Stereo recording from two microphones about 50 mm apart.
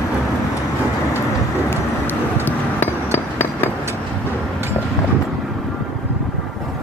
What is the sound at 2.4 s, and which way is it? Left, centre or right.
Glass, left.